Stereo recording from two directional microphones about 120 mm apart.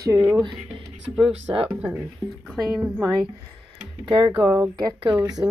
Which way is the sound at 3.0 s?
35° right (ahead or behind).